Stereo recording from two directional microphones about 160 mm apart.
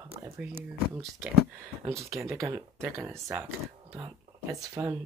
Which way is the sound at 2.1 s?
20° right (ahead or behind).